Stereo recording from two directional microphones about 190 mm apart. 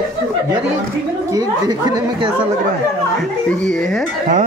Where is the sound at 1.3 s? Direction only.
20° right (ahead or behind).